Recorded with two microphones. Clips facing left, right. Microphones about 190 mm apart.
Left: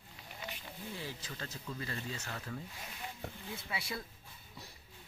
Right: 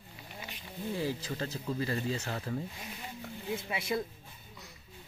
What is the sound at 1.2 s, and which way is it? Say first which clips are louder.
Speech: right 9 dB; 35° right (ahead or behind).